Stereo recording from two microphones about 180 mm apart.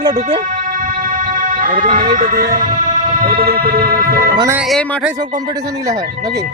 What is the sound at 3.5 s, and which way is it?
Speech, 55° right (ahead or behind).